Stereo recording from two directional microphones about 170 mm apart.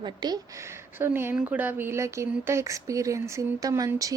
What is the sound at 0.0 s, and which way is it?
Speech, 25° right (ahead or behind).